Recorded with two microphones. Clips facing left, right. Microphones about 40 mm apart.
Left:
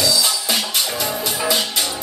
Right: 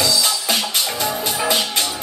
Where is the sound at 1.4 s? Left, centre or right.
Centre.